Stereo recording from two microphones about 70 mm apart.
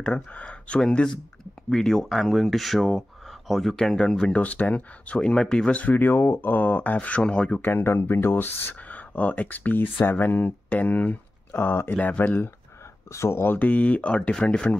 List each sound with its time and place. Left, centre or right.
0.0 s speech: centre
4.4 s speech: left
7.6 s speech: left
13.1 s speech: left; by 14.8 s centre